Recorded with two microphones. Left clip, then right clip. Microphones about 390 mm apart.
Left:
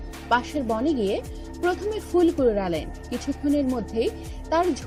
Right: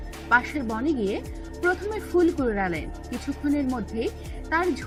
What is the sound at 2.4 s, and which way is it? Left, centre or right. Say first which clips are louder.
Speech: left 4 dB; left.